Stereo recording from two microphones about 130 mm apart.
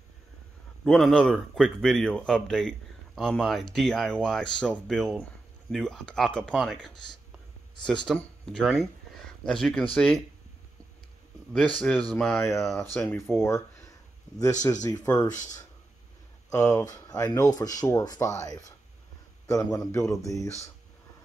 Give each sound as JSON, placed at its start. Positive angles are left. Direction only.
{"t": 0.8, "sound": "speech", "side_deg": 5}
{"t": 11.5, "sound": "speech", "side_deg": 5}
{"t": 13.0, "sound": "speech", "side_deg": 20}
{"t": 16.4, "sound": "speech", "side_deg": 25}